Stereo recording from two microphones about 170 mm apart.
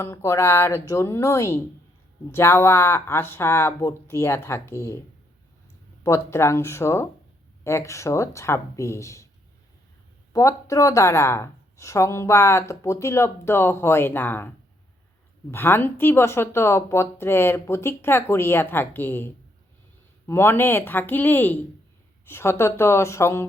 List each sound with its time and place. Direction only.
0.0 s speech: 15° left (ahead or behind)
6.0 s speech: 15° left (ahead or behind)
10.3 s speech: 20° left (ahead or behind)
15.5 s speech: 15° left (ahead or behind)